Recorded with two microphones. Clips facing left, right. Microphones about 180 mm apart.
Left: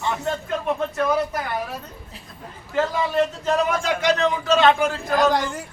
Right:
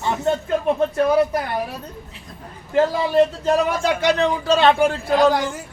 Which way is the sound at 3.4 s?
30° right (ahead or behind).